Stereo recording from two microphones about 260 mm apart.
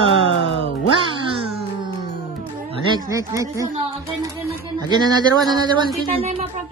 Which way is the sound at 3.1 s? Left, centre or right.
Centre.